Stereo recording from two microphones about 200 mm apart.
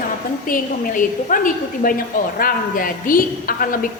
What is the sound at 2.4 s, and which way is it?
A woman's voice, 45° left (ahead or behind).